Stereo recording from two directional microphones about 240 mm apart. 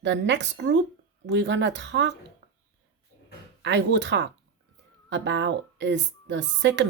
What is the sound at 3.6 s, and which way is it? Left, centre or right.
Speech, right.